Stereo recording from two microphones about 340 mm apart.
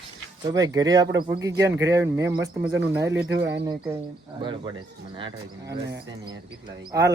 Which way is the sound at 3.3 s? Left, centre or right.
Right.